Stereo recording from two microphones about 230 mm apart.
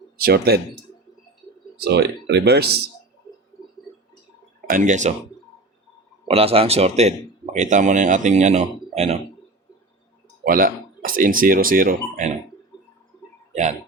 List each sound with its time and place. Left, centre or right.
0.2 s speech: right
1.8 s speech: right
4.7 s speech: right
6.2 s a man's voice: right
10.4 s speech: right
13.5 s a sound: right